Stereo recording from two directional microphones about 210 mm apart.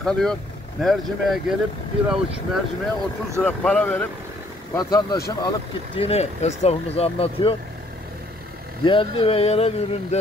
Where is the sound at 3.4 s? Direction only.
5° left (ahead or behind).